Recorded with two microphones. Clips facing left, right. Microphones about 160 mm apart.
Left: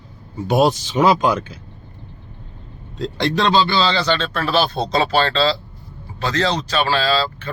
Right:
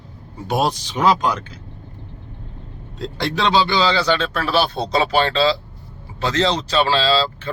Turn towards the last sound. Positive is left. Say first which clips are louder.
# right 1 dB
turn(degrees=-25)  # may be behind; listen again after turning